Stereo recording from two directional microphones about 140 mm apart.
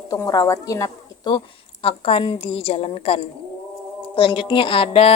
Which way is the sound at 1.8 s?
45° left (ahead or behind).